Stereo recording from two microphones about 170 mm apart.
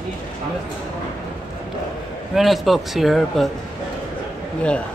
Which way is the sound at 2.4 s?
Centre (ahead or behind).